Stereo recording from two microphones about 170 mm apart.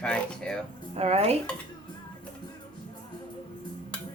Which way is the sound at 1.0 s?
35° right (ahead or behind).